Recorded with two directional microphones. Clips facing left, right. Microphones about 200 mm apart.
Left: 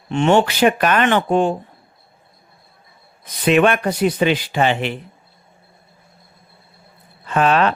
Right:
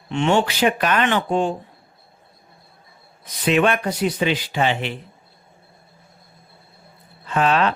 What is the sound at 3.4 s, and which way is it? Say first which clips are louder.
Speech: left 3 dB; 60° left (ahead or behind).